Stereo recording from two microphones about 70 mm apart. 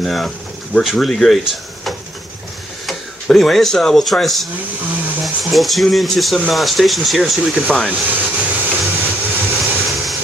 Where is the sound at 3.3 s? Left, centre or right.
Centre.